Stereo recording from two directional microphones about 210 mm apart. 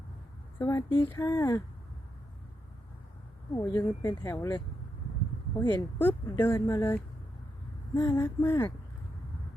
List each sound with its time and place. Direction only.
0.6 s speech: 15° left (ahead or behind)
3.5 s speech: 15° left (ahead or behind)